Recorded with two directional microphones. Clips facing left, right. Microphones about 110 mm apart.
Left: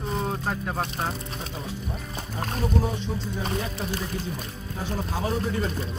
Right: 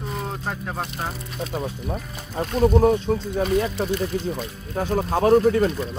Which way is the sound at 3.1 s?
60° right (ahead or behind).